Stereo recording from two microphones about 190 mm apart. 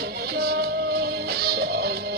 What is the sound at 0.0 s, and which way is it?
Music, 55° right (ahead or behind).